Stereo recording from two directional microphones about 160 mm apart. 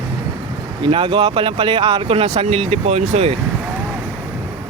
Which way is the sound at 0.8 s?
35° right (ahead or behind).